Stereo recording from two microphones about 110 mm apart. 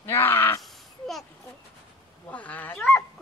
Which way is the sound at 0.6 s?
Centre (ahead or behind).